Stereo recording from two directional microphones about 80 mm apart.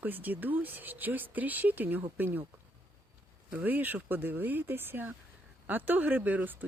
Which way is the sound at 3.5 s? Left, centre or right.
Right.